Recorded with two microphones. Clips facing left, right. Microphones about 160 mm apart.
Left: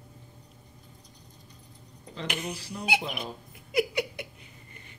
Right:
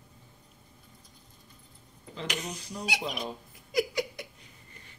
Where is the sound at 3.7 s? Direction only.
65° left (ahead or behind).